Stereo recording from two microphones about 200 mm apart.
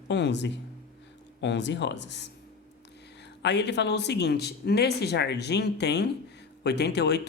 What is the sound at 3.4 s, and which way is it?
Speech, 60° left (ahead or behind).